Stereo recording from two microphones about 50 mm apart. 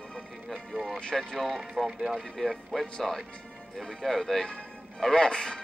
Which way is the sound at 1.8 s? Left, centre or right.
Centre.